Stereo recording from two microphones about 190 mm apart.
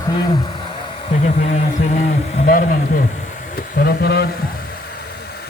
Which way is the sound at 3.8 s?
55° left (ahead or behind).